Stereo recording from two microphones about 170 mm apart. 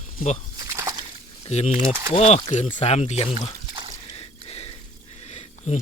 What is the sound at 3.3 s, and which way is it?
Pour, 25° right (ahead or behind).